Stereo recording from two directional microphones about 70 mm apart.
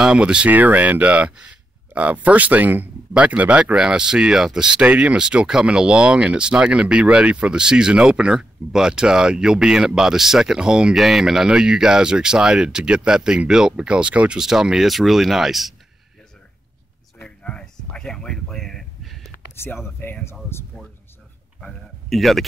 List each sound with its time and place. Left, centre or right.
0.0 s speech: centre
17.2 s a sound: centre
19.5 s speech: left
22.1 s speech: centre